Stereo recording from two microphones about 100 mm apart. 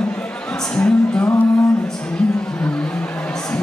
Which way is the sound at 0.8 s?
10° left (ahead or behind).